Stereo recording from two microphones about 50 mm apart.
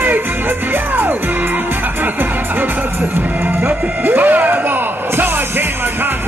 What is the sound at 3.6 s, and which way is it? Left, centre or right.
Music, right.